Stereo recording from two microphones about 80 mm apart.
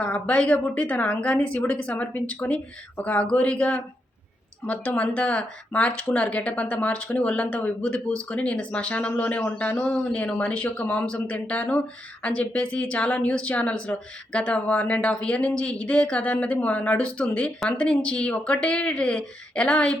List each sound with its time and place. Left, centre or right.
0.0 s speech: centre